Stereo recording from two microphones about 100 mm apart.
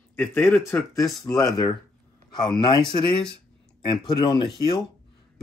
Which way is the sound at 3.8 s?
50° left (ahead or behind).